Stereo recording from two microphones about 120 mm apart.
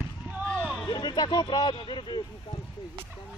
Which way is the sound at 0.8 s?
35° left (ahead or behind).